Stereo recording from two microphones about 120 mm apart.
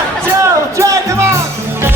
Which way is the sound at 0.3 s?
25° right (ahead or behind).